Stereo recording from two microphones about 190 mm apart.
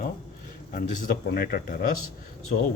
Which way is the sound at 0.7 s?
45° left (ahead or behind).